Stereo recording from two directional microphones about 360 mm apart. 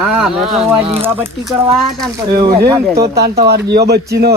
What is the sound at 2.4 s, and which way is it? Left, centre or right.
Speech, right.